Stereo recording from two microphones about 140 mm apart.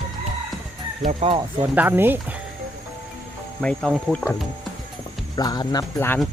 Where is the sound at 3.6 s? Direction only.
5° left (ahead or behind).